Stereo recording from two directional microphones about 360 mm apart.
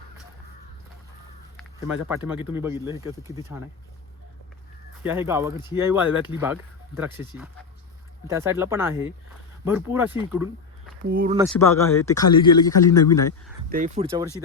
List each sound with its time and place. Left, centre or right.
1.5 s speech: centre
5.0 s speech: centre
11.1 s speech: right
11.4 s a man's voice: centre
13.7 s speech: right